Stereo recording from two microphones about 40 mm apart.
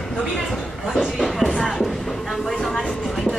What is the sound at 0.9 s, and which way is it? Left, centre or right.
Speech, centre.